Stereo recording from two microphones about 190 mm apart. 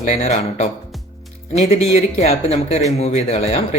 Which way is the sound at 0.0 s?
40° left (ahead or behind).